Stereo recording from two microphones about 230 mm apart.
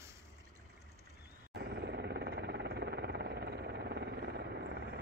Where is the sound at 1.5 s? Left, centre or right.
Right.